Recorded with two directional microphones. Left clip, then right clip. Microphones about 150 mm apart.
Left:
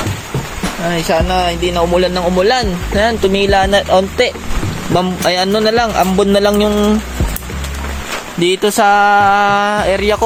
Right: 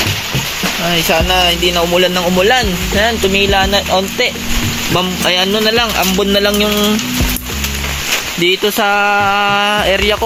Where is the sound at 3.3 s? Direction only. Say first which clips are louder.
Left 1 dB; 35° left (ahead or behind).